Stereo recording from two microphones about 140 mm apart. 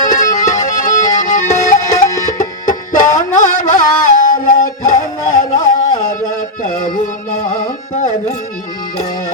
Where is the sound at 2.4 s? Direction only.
65° left (ahead or behind).